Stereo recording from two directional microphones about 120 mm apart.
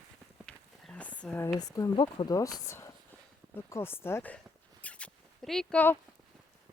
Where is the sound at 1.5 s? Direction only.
30° left (ahead or behind).